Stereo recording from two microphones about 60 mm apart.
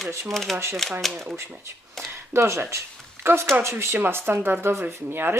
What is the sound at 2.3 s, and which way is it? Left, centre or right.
Speech, right.